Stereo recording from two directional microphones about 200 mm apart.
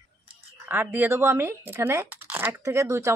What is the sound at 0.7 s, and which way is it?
Speech, 10° right (ahead or behind).